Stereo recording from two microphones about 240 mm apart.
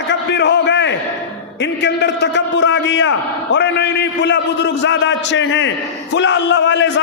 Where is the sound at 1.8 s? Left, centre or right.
Left.